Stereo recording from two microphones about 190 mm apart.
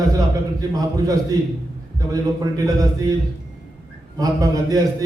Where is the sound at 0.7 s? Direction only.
20° right (ahead or behind).